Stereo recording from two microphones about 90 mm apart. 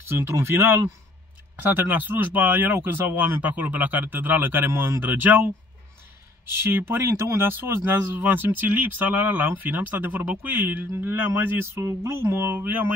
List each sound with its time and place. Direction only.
0.1 s speech: 30° right (ahead or behind)
6.5 s speech: 25° right (ahead or behind)